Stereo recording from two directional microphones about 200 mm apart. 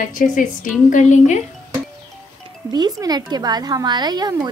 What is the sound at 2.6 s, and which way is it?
A woman's voice, 20° right (ahead or behind).